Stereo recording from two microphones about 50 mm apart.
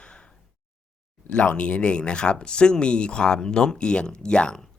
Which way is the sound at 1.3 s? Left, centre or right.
Left.